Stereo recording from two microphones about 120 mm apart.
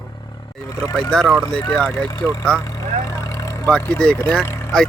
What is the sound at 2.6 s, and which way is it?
Vehicle, 30° left (ahead or behind).